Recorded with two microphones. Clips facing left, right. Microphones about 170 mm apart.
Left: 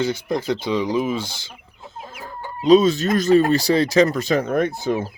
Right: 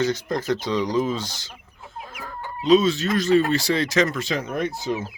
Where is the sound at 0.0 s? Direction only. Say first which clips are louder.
Left 1 dB; 10° left (ahead or behind).